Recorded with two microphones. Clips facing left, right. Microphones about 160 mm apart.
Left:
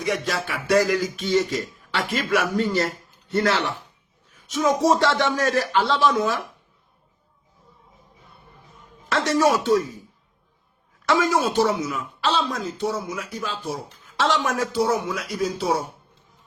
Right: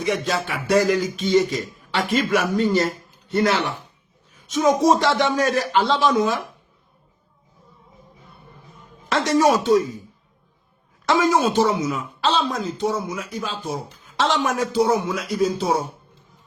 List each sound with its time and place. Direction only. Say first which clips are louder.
0.0 s speech: right 2 dB; 25° right (ahead or behind)
9.0 s speech: right 2 dB; 15° right (ahead or behind)
11.1 s speech: right 2 dB; 20° right (ahead or behind)